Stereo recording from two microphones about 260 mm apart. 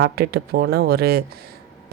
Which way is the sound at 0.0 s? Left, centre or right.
Right.